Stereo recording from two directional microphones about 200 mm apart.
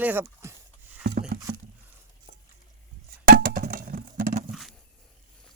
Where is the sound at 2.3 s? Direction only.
30° right (ahead or behind).